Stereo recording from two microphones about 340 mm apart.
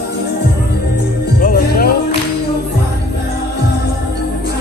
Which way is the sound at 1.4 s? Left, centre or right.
Left.